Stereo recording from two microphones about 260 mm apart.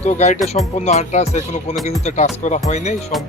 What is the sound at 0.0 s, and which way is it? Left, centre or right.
A man's voice, left.